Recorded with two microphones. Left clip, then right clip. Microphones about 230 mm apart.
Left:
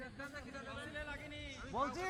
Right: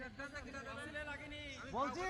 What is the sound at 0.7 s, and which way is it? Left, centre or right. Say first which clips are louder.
Speech: even; centre.